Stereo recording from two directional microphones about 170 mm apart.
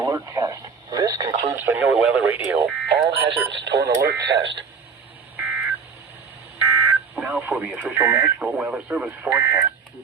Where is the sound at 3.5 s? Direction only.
90° right.